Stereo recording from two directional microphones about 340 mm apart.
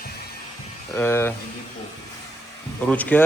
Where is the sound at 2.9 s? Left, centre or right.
Centre.